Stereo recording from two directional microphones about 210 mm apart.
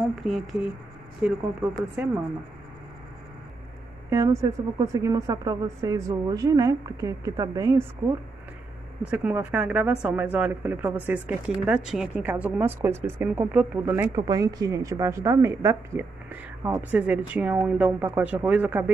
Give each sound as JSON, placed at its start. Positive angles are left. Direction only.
{"t": 0.2, "sound": "speech", "side_deg": 0}
{"t": 1.2, "sound": "speech", "side_deg": -10}
{"t": 4.1, "sound": "speech", "side_deg": -15}
{"t": 9.0, "sound": "speech", "side_deg": -5}